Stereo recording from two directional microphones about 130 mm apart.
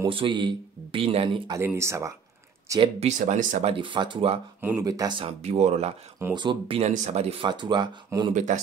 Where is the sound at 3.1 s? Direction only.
75° right (ahead or behind).